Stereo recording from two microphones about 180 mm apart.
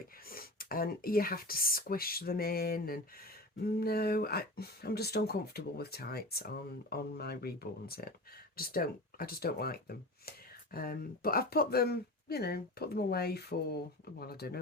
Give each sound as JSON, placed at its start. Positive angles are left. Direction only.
{"t": 0.3, "sound": "speech", "side_deg": 55}